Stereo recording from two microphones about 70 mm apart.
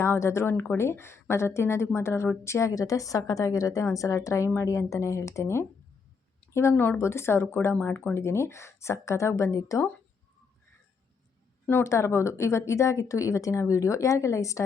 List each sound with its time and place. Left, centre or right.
0.0 s a woman's voice: left
6.7 s a woman's voice: left
8.2 s speech: left
11.8 s speech: left